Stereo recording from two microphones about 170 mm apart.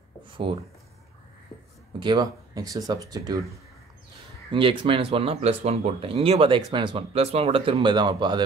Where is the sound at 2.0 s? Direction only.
25° right (ahead or behind).